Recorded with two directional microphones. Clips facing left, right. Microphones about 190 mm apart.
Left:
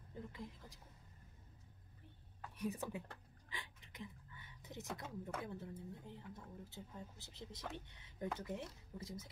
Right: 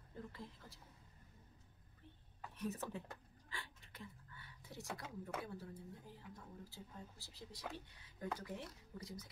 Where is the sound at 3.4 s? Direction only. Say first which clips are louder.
Even; 15° left (ahead or behind).